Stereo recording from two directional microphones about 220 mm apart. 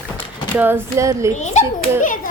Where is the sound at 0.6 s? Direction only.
10° right (ahead or behind).